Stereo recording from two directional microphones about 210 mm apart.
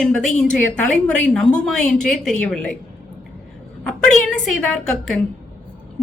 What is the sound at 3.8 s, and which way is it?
A woman's voice, 5° left (ahead or behind).